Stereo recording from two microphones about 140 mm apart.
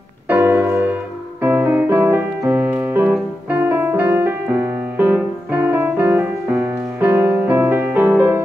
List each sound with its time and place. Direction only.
0.3 s music: 15° right (ahead or behind)
1.4 s keyboard: 15° right (ahead or behind)